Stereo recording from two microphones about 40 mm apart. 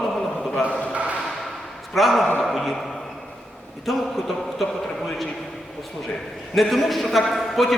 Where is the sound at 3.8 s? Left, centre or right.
Centre.